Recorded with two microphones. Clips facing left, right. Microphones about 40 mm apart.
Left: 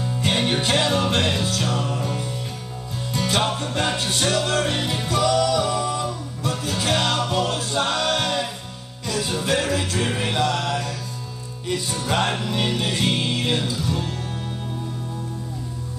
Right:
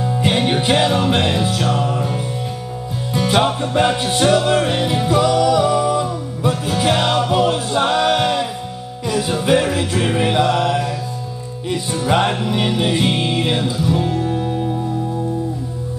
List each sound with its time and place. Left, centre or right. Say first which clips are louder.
0.0 s music: right 5 dB; centre